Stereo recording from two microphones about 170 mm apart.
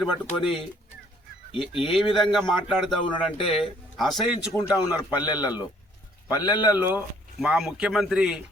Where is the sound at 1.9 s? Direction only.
Centre (ahead or behind).